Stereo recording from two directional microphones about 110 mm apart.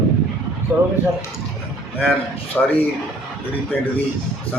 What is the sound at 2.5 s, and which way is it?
Speech, 5° left (ahead or behind).